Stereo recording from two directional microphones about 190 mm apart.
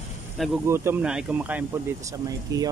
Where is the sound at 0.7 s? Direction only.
10° right (ahead or behind).